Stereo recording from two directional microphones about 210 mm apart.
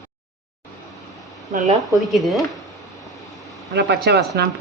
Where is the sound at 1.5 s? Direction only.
35° right (ahead or behind).